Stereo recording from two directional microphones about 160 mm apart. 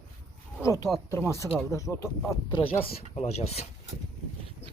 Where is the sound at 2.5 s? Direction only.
35° left (ahead or behind).